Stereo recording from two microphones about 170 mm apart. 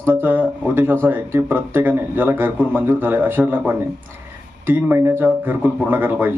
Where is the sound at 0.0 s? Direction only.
10° right (ahead or behind).